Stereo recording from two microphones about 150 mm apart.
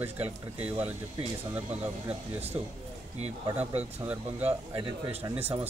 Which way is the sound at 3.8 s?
10° right (ahead or behind).